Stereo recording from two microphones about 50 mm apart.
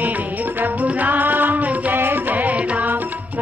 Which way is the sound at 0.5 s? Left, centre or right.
Right.